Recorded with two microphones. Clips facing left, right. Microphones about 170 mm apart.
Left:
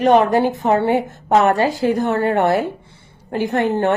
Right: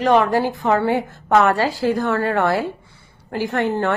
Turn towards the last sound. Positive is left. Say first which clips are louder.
# left 3 dB
turn(degrees=20)  # may be behind; listen again after turning